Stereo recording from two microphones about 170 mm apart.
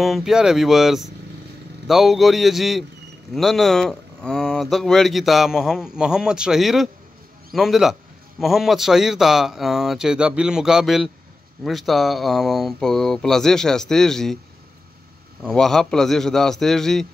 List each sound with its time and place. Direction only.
0.0 s speech: centre (ahead or behind)
15.4 s speech: 5° left (ahead or behind)